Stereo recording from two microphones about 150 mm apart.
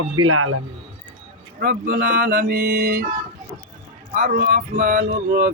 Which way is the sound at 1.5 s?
75° right (ahead or behind).